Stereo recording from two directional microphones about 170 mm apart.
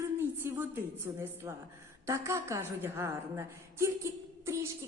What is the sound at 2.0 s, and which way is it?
A woman's voice, 15° right (ahead or behind).